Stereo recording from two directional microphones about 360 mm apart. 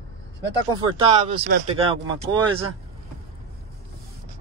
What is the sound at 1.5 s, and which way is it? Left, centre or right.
Speech, right.